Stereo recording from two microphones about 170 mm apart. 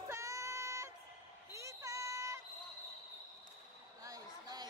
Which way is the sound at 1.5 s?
15° right (ahead or behind).